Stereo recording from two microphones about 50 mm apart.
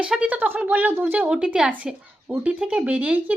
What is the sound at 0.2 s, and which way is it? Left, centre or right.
A woman's voice, right.